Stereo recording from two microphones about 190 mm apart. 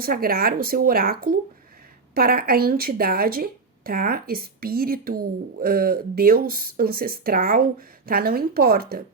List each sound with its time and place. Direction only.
0.0 s speech: 50° right (ahead or behind)